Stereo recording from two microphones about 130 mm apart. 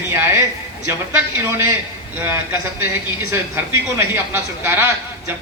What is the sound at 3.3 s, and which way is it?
A man's voice, 20° right (ahead or behind).